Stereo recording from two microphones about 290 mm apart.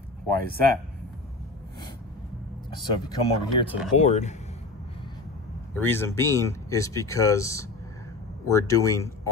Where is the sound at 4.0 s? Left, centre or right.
Left.